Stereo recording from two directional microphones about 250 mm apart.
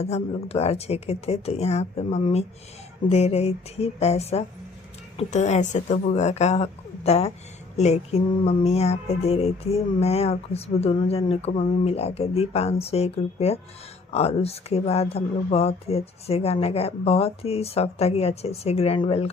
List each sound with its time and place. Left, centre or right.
0.0 s music: left